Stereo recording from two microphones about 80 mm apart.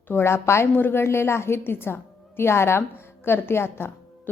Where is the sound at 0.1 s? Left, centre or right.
Left.